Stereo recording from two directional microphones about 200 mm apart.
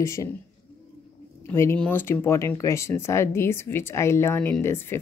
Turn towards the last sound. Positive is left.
turn(degrees=10)  # may be behind; listen again after turning